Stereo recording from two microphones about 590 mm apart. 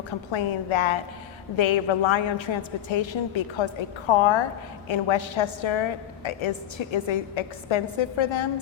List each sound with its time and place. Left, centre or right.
0.3 s a woman's voice: left